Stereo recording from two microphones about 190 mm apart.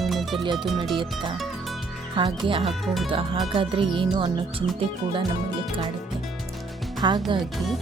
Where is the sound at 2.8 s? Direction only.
Centre (ahead or behind).